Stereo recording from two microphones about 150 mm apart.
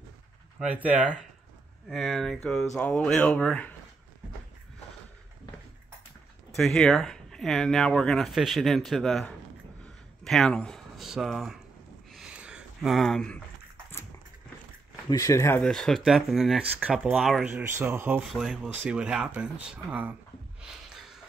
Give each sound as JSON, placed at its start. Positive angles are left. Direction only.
{"t": 0.6, "sound": "speech", "side_deg": -10}
{"t": 6.5, "sound": "speech", "side_deg": 5}
{"t": 12.1, "sound": "a sound", "side_deg": -5}
{"t": 15.0, "sound": "speech", "side_deg": 25}
{"t": 15.7, "sound": "speech", "side_deg": 0}
{"t": 17.6, "sound": "speech", "side_deg": -15}
{"t": 18.3, "sound": "speech", "side_deg": 0}
{"t": 20.6, "sound": "snort", "side_deg": -5}